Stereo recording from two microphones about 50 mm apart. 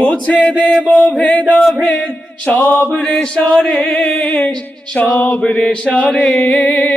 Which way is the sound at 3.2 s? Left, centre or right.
Centre.